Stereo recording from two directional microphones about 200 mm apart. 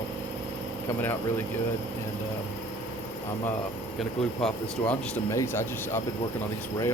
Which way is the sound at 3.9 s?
Centre (ahead or behind).